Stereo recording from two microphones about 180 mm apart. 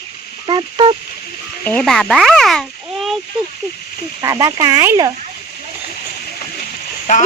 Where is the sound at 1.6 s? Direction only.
5° left (ahead or behind).